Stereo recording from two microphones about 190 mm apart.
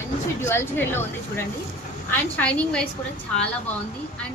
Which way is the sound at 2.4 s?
5° left (ahead or behind).